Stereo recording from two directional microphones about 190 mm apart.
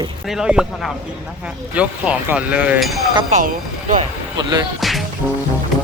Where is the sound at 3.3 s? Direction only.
45° right (ahead or behind).